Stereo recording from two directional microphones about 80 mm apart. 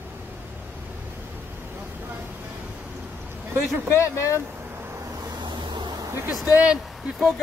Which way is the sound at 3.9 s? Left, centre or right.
Left.